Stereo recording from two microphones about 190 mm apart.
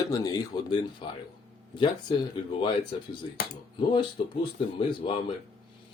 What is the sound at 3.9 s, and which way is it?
Speech, 25° left (ahead or behind).